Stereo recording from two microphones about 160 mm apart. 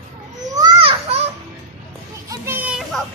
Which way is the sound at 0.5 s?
30° right (ahead or behind).